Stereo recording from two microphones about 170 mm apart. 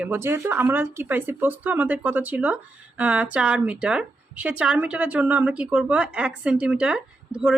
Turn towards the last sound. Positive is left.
turn(degrees=-5)  # may be behind; listen again after turning